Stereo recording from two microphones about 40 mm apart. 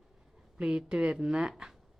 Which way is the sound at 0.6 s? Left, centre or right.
Centre.